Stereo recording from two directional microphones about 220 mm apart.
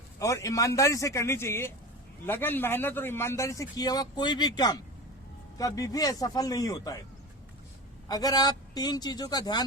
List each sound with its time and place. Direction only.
0.2 s a man's voice: 15° left (ahead or behind)
8.0 s a man's voice: 15° left (ahead or behind)